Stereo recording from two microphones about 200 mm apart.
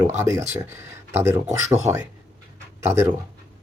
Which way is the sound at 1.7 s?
35° right (ahead or behind).